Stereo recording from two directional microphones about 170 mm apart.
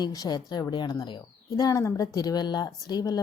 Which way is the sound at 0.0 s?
25° left (ahead or behind).